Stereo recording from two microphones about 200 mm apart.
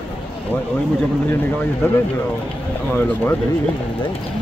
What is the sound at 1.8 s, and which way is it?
Speech, 10° left (ahead or behind).